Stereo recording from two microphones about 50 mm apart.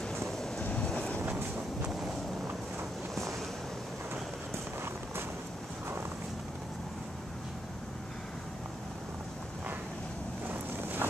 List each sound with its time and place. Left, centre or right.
0.7 s train: centre
10.5 s boat: right